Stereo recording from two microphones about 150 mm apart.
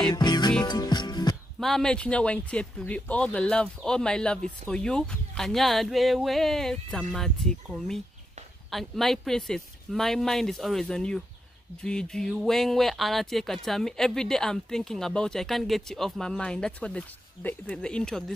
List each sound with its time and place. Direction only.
0.0 s music: 30° left (ahead or behind)
1.6 s speech: 5° left (ahead or behind)